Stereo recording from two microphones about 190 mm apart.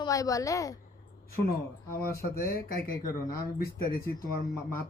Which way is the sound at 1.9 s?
15° left (ahead or behind).